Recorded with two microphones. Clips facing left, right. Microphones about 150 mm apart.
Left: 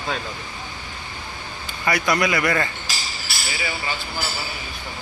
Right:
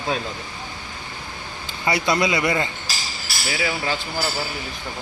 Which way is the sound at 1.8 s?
25° right (ahead or behind).